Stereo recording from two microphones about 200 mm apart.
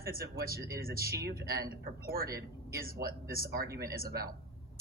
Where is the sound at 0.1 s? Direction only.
45° right (ahead or behind).